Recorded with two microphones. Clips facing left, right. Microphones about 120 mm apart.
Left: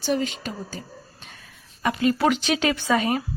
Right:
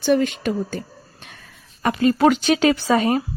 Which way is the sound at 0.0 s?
55° right (ahead or behind).